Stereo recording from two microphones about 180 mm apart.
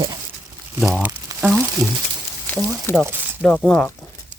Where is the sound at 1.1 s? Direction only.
20° right (ahead or behind).